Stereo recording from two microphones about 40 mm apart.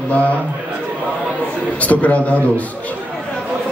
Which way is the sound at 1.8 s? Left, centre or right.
Left.